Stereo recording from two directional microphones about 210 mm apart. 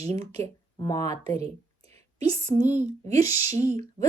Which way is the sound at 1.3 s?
30° right (ahead or behind).